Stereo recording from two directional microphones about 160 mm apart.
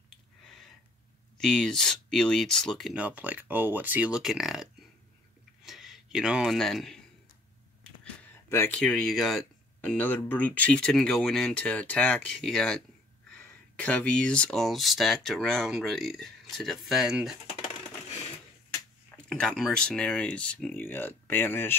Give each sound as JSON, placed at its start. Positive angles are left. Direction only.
{"t": 0.1, "sound": "a sound", "side_deg": 0}
{"t": 1.4, "sound": "speech", "side_deg": 5}
{"t": 5.7, "sound": "speech", "side_deg": 0}
{"t": 7.8, "sound": "a sound", "side_deg": 5}
{"t": 8.5, "sound": "speech", "side_deg": 15}
{"t": 8.7, "sound": "speech", "side_deg": 5}
{"t": 19.2, "sound": "speech", "side_deg": 5}